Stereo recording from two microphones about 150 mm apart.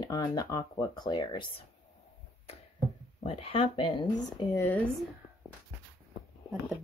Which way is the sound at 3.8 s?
25° left (ahead or behind).